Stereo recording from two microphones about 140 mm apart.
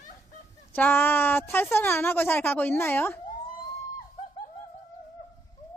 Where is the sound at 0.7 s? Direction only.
15° left (ahead or behind).